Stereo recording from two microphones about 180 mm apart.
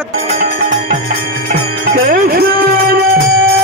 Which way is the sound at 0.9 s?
55° right (ahead or behind).